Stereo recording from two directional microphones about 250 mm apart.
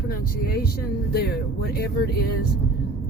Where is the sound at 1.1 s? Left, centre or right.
Left.